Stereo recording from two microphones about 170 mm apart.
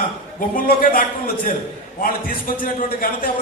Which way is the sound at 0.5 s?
55° left (ahead or behind).